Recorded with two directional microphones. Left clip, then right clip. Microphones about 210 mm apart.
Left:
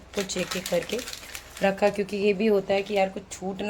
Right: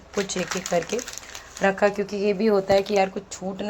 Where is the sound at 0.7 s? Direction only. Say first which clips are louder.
Right 3 dB; centre (ahead or behind).